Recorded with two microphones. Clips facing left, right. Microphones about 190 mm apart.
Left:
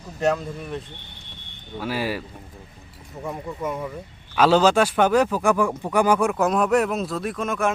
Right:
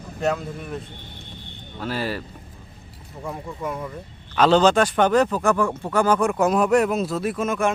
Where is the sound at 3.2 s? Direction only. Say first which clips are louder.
Left 1 dB; centre (ahead or behind).